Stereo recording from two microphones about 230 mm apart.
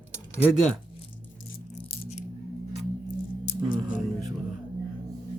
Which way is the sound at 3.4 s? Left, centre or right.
Left.